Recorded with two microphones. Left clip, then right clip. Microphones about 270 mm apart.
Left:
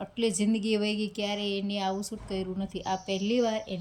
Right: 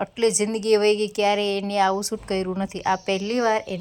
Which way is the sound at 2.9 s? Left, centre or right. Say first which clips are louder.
Right 7 dB; right.